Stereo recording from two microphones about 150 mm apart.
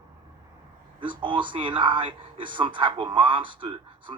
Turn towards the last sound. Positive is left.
turn(degrees=-35)  # may be behind; listen again after turning